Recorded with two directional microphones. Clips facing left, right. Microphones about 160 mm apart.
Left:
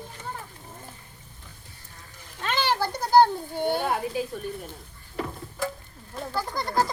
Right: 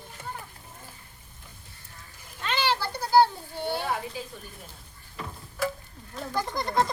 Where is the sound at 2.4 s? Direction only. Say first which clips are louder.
Left 2 dB; 50° left (ahead or behind).